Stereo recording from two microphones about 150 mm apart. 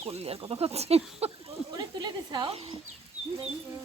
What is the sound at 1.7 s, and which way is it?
Speech, 30° right (ahead or behind).